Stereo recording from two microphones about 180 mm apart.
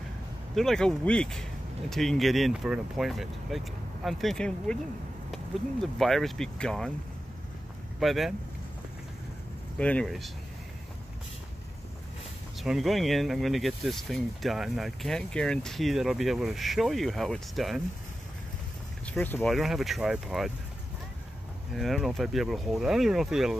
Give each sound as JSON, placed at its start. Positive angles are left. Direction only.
{"t": 0.6, "sound": "speech", "side_deg": 5}
{"t": 8.0, "sound": "speech", "side_deg": 0}
{"t": 9.8, "sound": "speech", "side_deg": 5}
{"t": 12.5, "sound": "speech", "side_deg": 0}
{"t": 19.0, "sound": "speech", "side_deg": 10}
{"t": 21.7, "sound": "speech", "side_deg": 0}